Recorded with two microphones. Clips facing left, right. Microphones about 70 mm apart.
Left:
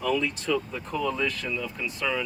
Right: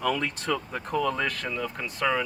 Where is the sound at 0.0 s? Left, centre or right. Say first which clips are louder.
Left 1 dB; right.